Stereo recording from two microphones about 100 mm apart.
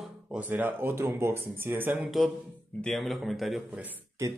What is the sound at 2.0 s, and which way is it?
Speech, centre (ahead or behind).